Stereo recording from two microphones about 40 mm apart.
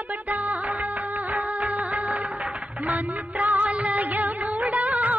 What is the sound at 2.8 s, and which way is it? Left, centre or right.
Music of bollywood, right.